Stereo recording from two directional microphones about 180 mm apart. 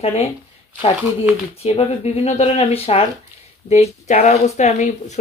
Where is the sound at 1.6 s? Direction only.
35° left (ahead or behind).